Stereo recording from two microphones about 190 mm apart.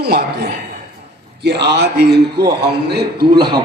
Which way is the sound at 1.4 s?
60° right (ahead or behind).